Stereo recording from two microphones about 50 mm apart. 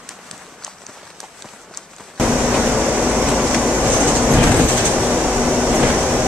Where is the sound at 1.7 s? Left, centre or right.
Centre.